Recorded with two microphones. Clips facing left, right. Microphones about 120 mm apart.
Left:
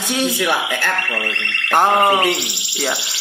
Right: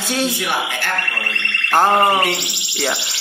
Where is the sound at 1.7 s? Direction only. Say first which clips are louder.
Even; 15° left (ahead or behind).